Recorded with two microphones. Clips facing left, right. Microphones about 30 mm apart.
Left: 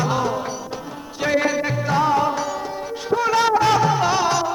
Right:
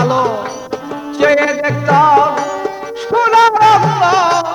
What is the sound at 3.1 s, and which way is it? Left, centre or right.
Music, right.